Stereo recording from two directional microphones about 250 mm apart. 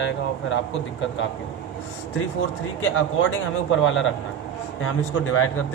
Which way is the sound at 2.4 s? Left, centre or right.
Left.